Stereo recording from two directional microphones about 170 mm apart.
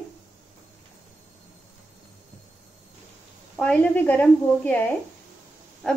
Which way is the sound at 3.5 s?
10° left (ahead or behind).